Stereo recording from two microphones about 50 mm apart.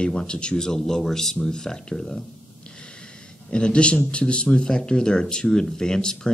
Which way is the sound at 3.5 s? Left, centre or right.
Centre.